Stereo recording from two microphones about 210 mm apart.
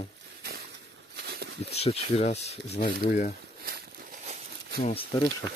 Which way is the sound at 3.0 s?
45° left (ahead or behind).